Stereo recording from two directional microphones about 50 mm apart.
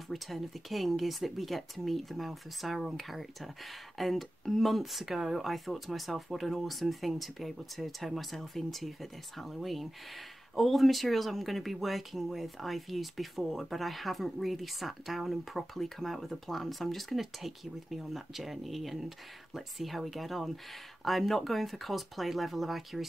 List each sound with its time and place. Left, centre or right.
0.1 s speech: centre